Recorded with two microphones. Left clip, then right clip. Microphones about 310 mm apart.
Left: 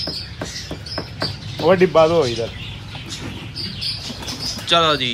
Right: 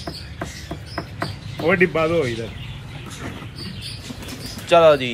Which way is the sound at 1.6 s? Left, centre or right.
Centre.